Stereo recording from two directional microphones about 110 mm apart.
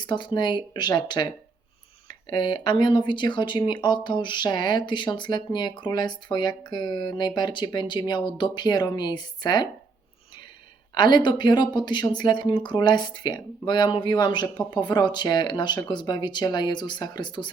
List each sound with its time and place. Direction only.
0.0 s speech: 45° left (ahead or behind)
10.9 s speech: 40° left (ahead or behind)